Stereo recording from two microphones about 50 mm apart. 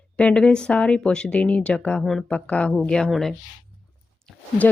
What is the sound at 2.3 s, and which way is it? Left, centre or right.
Speech, left.